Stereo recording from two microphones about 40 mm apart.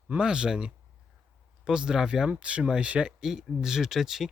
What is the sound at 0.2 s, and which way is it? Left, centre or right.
Speech, right.